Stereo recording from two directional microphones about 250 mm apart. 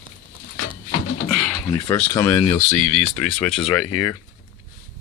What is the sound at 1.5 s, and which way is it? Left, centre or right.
Speech, centre.